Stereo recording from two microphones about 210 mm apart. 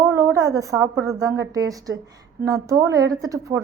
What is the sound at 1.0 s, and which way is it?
A woman's voice, 15° right (ahead or behind).